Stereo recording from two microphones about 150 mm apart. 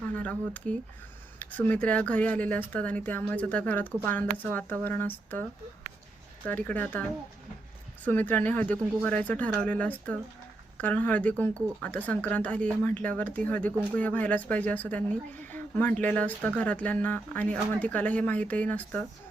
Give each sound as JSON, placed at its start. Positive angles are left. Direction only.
{"t": 0.1, "sound": "speech", "side_deg": 10}
{"t": 8.0, "sound": "speech", "side_deg": 10}